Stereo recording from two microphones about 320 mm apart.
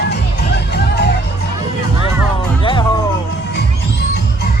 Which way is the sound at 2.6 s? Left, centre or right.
Centre.